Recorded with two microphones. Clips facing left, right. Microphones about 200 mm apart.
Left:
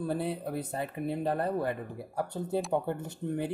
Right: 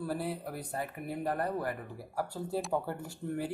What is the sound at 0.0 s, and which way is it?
Speech, 20° left (ahead or behind).